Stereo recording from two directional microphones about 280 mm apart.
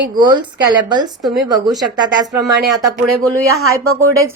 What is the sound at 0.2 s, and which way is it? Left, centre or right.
Speech, centre.